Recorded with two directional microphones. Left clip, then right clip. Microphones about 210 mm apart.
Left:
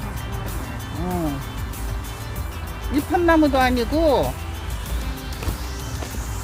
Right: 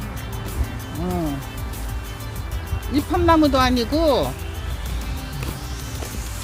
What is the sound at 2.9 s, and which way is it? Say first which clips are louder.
Speech: even; 60° right (ahead or behind).